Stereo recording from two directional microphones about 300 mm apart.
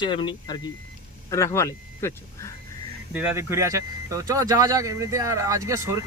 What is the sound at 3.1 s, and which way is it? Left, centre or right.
Speech, centre.